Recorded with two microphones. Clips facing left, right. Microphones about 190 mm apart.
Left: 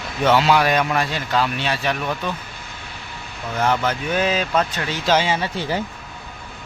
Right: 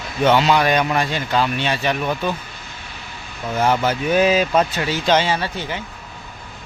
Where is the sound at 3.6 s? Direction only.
10° right (ahead or behind).